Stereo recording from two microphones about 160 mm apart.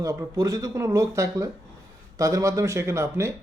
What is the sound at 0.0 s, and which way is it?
Speech, 20° right (ahead or behind).